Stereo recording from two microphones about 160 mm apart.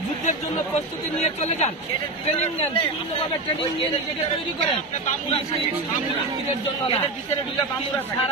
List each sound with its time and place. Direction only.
1.2 s speech: 45° left (ahead or behind)